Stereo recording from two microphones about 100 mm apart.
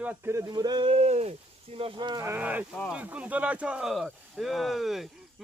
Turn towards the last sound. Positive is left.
turn(degrees=0)  # may be behind; listen again after turning